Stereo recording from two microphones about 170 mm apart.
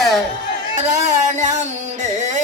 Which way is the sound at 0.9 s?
45° right (ahead or behind).